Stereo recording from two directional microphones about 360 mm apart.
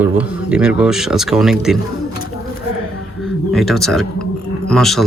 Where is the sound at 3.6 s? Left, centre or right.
Centre.